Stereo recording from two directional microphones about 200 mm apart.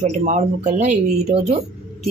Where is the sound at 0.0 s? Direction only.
35° right (ahead or behind).